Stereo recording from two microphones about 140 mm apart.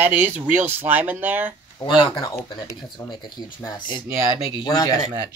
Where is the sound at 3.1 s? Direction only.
30° left (ahead or behind).